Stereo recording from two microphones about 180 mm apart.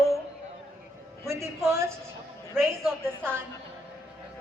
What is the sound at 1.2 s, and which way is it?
A man's voice, 15° right (ahead or behind).